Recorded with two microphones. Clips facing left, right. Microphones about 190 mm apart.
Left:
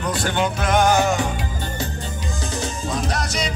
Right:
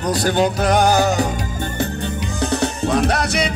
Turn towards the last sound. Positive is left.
turn(degrees=-60)  # may be behind; listen again after turning